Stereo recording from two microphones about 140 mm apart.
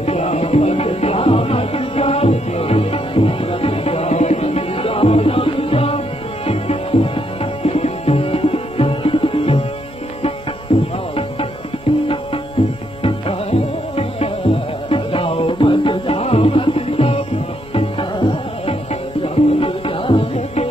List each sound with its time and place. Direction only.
0.0 s music: 50° left (ahead or behind)
10.7 s music: 40° left (ahead or behind)
12.6 s music: 45° left (ahead or behind)